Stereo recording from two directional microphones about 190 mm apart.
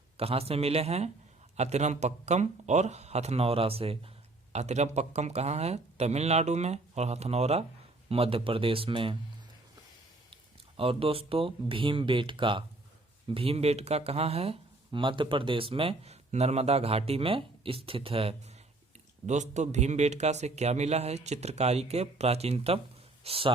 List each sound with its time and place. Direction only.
0.2 s speech: 30° right (ahead or behind)
10.8 s speech: 30° right (ahead or behind)